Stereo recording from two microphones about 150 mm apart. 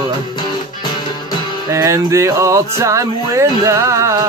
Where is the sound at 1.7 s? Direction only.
20° right (ahead or behind).